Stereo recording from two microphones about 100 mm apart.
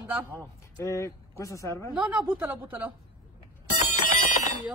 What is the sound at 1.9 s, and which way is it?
Speech, 10° right (ahead or behind).